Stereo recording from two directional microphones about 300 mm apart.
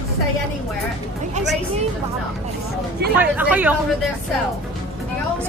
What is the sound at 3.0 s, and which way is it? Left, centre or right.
Speech, right.